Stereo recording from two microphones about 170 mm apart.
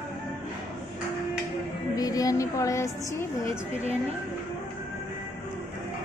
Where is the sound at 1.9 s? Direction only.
20° left (ahead or behind).